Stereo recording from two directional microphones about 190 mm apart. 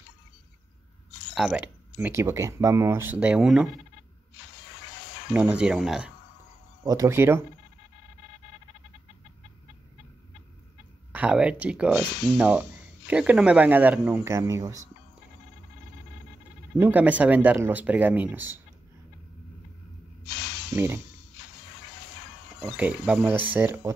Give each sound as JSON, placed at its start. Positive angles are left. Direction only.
{"t": 1.3, "sound": "speech", "side_deg": -5}
{"t": 5.3, "sound": "speech", "side_deg": -5}
{"t": 6.8, "sound": "speech", "side_deg": -15}
{"t": 11.1, "sound": "speech", "side_deg": -5}
{"t": 16.7, "sound": "speech", "side_deg": -10}
{"t": 20.2, "sound": "a sound", "side_deg": 70}
{"t": 20.7, "sound": "speech", "side_deg": -10}
{"t": 22.8, "sound": "speech", "side_deg": -10}